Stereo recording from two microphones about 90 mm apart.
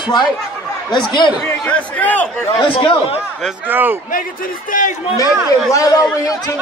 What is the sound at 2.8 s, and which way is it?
Speech, 90° left.